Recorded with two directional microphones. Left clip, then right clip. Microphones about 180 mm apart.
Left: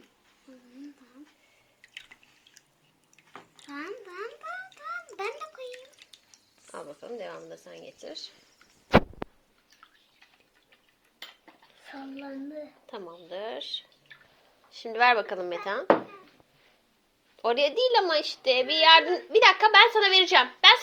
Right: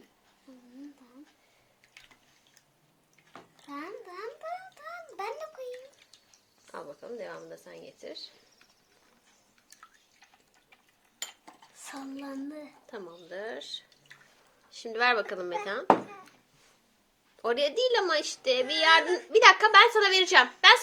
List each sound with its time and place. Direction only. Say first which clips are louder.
3.7 s a sound: left 2 dB; 40° right (ahead or behind)
6.7 s speech: left 1 dB; 15° left (ahead or behind)
11.9 s child singing: even; 30° right (ahead or behind)
12.9 s a woman's voice: left 1 dB; centre (ahead or behind)
17.4 s a woman's voice: left 3 dB; centre (ahead or behind)